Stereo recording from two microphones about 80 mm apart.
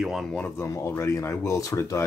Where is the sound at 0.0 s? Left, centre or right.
Centre.